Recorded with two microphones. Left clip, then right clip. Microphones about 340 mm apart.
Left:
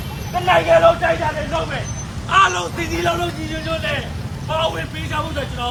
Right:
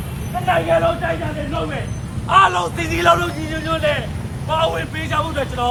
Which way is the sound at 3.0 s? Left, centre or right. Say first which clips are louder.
Right 8 dB; centre.